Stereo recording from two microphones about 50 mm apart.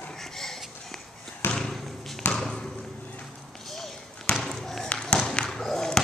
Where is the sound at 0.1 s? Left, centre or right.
Centre.